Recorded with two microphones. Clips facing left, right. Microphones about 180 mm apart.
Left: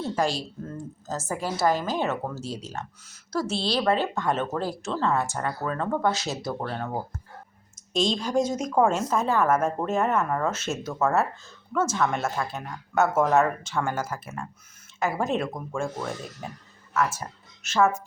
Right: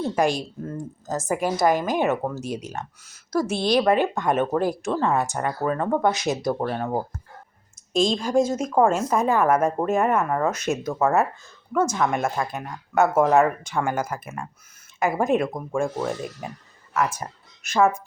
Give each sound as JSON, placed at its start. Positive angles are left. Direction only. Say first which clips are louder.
{"t": 0.2, "sound": "a woman's voice", "louder": "right 5 dB", "side_deg": -15}
{"t": 8.2, "sound": "a woman's voice", "louder": "right 4 dB", "side_deg": -10}